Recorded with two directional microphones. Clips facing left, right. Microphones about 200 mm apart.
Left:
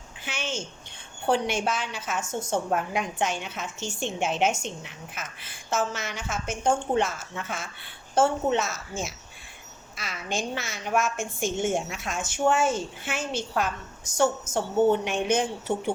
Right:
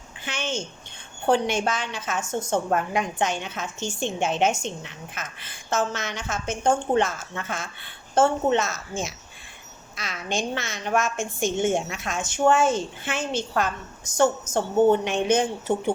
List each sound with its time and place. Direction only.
0.3 s a sound: 5° left (ahead or behind)
1.3 s a woman's voice: 5° left (ahead or behind)
14.5 s a woman's voice: 25° left (ahead or behind)
15.0 s a woman's voice: 5° left (ahead or behind)